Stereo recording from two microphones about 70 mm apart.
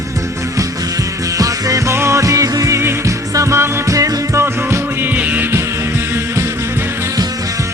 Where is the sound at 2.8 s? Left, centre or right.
Right.